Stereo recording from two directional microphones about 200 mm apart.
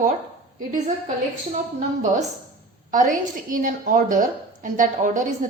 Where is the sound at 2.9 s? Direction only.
40° right (ahead or behind).